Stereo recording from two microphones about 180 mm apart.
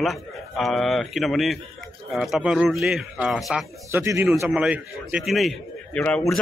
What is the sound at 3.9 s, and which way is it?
Speech, 15° right (ahead or behind).